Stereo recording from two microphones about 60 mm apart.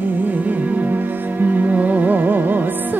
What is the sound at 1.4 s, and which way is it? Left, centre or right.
Music, right.